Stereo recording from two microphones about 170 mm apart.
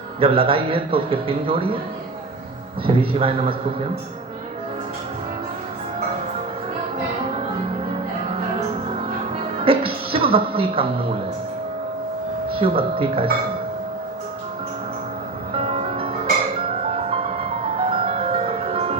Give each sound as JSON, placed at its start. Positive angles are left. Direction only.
{"t": 0.2, "sound": "a man's voice", "side_deg": -35}
{"t": 2.8, "sound": "a man's voice", "side_deg": -35}
{"t": 9.6, "sound": "a sound", "side_deg": -35}
{"t": 12.5, "sound": "speech", "side_deg": -35}
{"t": 15.5, "sound": "music", "side_deg": -35}